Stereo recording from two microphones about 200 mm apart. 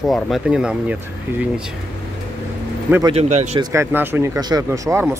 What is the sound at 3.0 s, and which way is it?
Speech, 30° right (ahead or behind).